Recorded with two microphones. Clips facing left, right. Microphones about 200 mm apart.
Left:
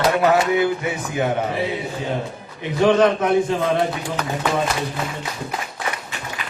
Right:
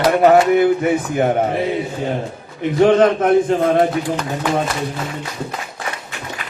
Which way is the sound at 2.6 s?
55° right (ahead or behind).